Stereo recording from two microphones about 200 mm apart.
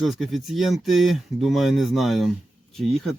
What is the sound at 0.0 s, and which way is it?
Speech, centre (ahead or behind).